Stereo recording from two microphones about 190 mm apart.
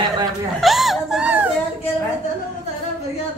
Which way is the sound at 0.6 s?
Centre (ahead or behind).